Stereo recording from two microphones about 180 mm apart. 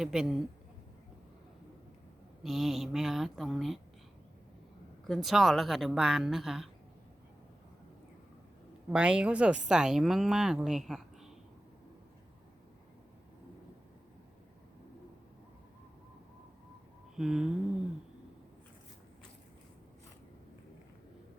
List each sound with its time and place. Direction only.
0.0 s a woman's voice: 5° right (ahead or behind)
2.4 s a woman's voice: centre (ahead or behind)
5.0 s a woman's voice: centre (ahead or behind)
8.9 s a woman's voice: 5° right (ahead or behind)
17.2 s a woman's voice: 5° right (ahead or behind)